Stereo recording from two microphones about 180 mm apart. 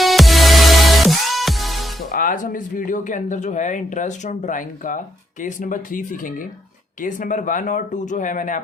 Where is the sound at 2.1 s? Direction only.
50° left (ahead or behind).